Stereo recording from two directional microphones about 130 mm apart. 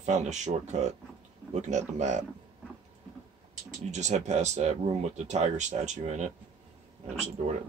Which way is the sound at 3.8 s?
65° right (ahead or behind).